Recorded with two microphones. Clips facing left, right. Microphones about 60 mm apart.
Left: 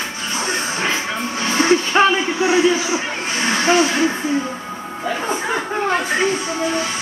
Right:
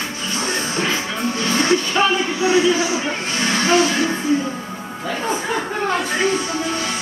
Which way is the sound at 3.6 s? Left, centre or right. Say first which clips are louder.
Left 1 dB; centre.